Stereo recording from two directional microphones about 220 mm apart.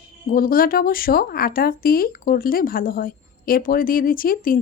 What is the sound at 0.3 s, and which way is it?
A woman's voice, 40° left (ahead or behind).